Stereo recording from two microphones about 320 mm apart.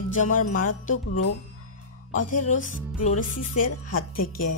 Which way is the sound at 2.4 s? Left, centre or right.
Left.